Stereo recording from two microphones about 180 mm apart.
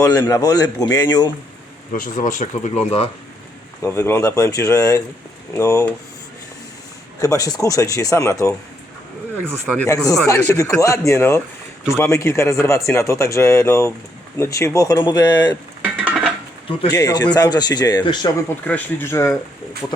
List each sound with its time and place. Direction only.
0.0 s speech: 15° left (ahead or behind)
1.9 s speech: 45° left (ahead or behind)
3.8 s speech: 15° left (ahead or behind)
7.2 s speech: 20° left (ahead or behind)
9.8 s speech: 20° left (ahead or behind)
15.8 s stir: 10° right (ahead or behind)
16.9 s speech: 20° left (ahead or behind)
18.4 s speech: 10° left (ahead or behind)